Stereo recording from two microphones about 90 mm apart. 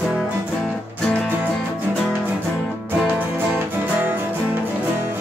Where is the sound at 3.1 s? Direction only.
20° right (ahead or behind).